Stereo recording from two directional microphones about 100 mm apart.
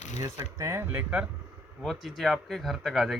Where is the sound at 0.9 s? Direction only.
15° right (ahead or behind).